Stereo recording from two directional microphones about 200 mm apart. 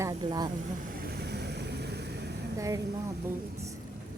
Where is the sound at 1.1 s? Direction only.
55° right (ahead or behind).